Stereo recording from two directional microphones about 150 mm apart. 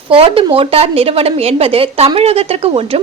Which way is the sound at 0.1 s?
40° right (ahead or behind).